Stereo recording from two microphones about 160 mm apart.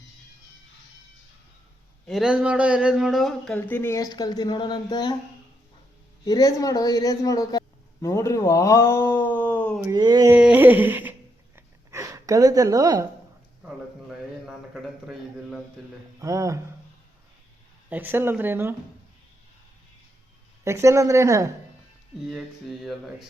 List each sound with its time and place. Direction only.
2.0 s speech: centre (ahead or behind); by 5.1 s 25° left (ahead or behind)
6.2 s speech: 25° left (ahead or behind)
9.9 s speech: 25° right (ahead or behind)
10.2 s humming: 10° right (ahead or behind)
11.5 s a sound: 20° right (ahead or behind)
13.7 s a sound: 5° right (ahead or behind)
15.0 s mantra: centre (ahead or behind)
16.2 s speech: 20° right (ahead or behind)
17.8 s humming: 10° right (ahead or behind)
20.7 s speech: 15° right (ahead or behind)
22.3 s mantra: centre (ahead or behind)